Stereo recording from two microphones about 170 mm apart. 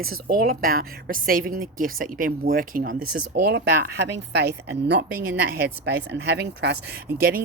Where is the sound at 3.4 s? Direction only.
80° right.